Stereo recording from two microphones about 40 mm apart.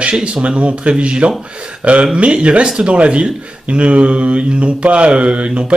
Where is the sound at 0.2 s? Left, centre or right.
Right.